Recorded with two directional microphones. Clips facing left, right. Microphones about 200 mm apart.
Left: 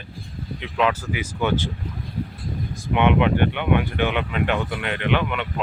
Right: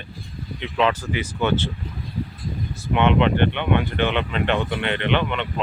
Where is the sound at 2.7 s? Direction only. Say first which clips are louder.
Even; 15° left (ahead or behind).